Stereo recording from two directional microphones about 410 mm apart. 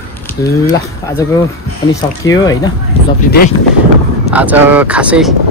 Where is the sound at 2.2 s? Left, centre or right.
Centre.